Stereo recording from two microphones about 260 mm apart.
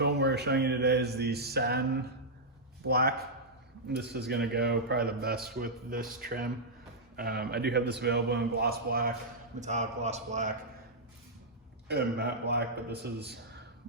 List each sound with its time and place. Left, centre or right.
0.0 s a man's voice: right
2.8 s a man's voice: right
11.9 s a man's voice: right